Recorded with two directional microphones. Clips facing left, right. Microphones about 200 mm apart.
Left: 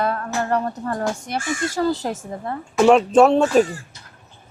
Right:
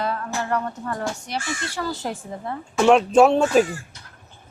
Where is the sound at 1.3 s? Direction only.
50° left (ahead or behind).